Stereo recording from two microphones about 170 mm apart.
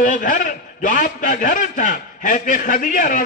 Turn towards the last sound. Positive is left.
turn(degrees=50)  # may be behind; listen again after turning